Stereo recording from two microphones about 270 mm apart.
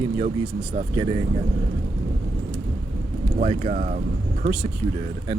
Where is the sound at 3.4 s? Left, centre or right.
Right.